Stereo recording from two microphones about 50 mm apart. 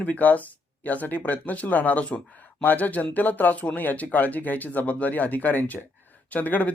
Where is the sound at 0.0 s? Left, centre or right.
Left.